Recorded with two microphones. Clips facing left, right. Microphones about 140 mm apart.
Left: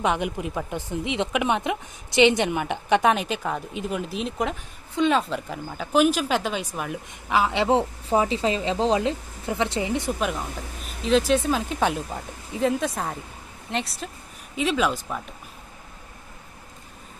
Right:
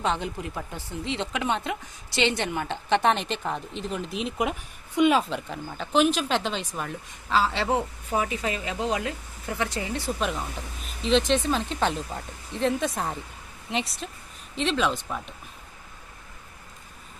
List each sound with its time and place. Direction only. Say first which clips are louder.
0.0 s speech: left 3 dB; 15° left (ahead or behind); by 5.2 s 10° right (ahead or behind)
5.2 s a woman's voice: left 2 dB; 5° left (ahead or behind); by 10.1 s 20° left (ahead or behind)
10.2 s speech: left 2 dB; 5° left (ahead or behind)